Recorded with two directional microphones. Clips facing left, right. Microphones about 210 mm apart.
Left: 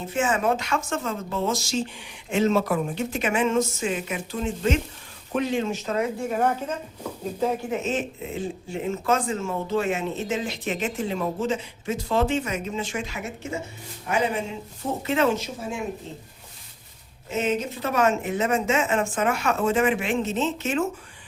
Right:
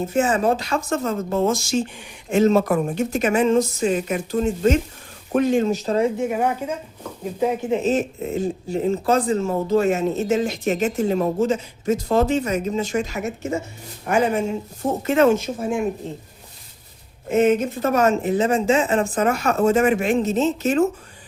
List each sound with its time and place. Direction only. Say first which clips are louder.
0.1 s speech: right 3 dB; 40° right (ahead or behind)
6.1 s a woman's voice: right 3 dB; 15° right (ahead or behind)
7.7 s speech: right 6 dB; 35° right (ahead or behind); by 16.2 s 55° right (ahead or behind)
17.2 s speech: right 8 dB; 55° right (ahead or behind)